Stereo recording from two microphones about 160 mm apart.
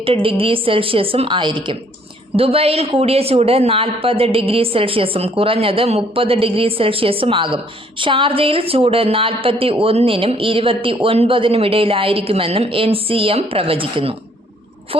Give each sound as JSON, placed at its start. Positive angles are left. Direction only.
{"t": 0.0, "sound": "speech", "side_deg": -35}